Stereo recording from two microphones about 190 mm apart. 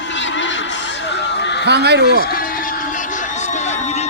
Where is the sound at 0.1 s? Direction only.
75° left (ahead or behind).